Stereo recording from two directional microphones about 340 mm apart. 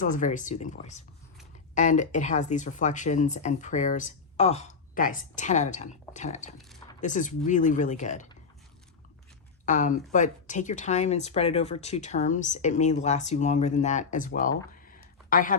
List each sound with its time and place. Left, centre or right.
0.1 s speech: left
6.6 s a sound: centre
7.0 s speech: left
9.6 s speech: left